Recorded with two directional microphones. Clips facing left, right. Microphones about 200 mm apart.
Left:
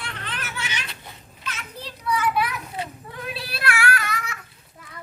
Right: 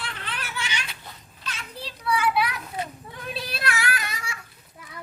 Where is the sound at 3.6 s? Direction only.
20° right (ahead or behind).